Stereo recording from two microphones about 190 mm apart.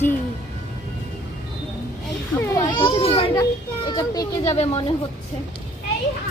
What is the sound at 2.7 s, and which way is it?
Speech, 25° left (ahead or behind).